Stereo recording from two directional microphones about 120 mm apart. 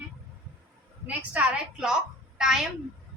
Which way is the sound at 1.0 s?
10° right (ahead or behind).